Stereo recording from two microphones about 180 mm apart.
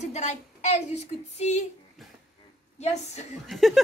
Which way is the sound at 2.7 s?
35° left (ahead or behind).